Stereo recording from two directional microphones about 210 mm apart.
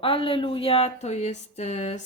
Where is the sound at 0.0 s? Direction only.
25° left (ahead or behind).